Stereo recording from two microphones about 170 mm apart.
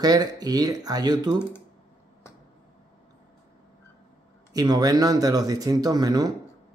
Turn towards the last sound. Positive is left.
turn(degrees=-20)  # may be behind; listen again after turning